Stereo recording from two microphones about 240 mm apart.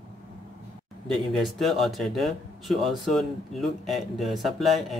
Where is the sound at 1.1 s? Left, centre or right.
Centre.